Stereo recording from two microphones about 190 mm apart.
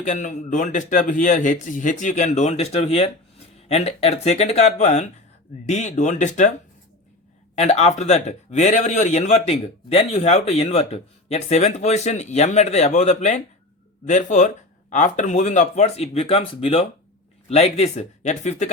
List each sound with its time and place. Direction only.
0.0 s speech: 40° left (ahead or behind)
7.5 s speech: 35° left (ahead or behind)